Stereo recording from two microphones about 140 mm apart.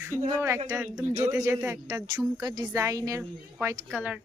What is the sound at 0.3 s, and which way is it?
Speech, 20° right (ahead or behind).